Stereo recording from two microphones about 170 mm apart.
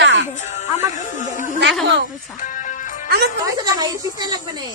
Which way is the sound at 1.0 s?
50° left (ahead or behind).